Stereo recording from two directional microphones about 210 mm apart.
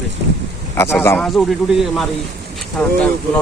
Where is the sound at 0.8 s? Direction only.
10° left (ahead or behind).